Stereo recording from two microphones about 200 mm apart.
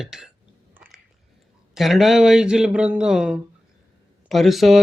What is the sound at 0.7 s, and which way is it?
Biting, 10° right (ahead or behind).